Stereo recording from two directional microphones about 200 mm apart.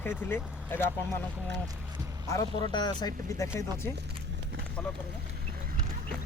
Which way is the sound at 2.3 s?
20° left (ahead or behind).